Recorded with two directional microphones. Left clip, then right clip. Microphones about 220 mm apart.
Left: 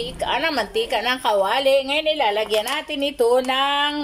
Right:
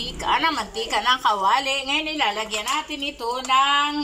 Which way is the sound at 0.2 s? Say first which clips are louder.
Even; 20° left (ahead or behind).